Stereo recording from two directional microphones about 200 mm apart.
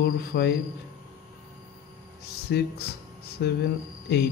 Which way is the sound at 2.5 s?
55° left (ahead or behind).